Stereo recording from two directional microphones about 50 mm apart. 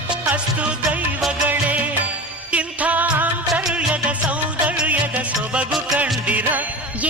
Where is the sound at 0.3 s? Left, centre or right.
Right.